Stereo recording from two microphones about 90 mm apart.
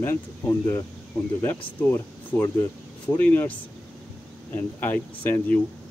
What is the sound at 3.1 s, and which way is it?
Speech, 15° left (ahead or behind).